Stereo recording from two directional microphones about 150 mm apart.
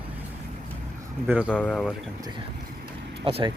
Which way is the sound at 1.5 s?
10° left (ahead or behind).